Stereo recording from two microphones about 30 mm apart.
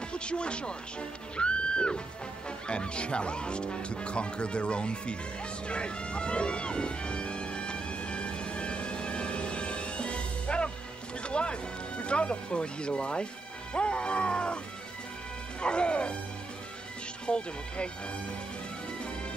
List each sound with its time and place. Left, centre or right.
0.1 s speech: left
1.3 s music: left
2.7 s speech: left
5.7 s music: left
12.0 s speech: left
15.6 s speech: left
17.3 s speech: left